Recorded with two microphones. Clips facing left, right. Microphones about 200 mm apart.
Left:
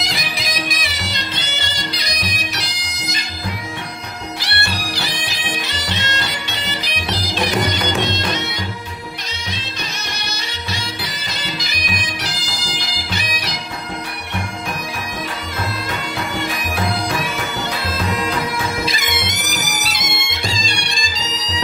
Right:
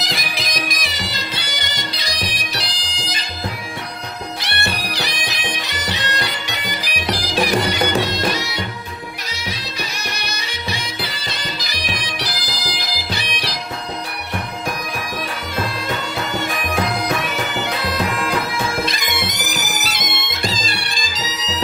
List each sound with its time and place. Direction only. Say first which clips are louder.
0.0 s music: even; centre (ahead or behind); by 3.2 s 30° right (ahead or behind)
4.4 s bagpipes: right 1 dB; 20° right (ahead or behind)
7.9 s music: right 1 dB; 10° right (ahead or behind)
18.9 s music: even; centre (ahead or behind)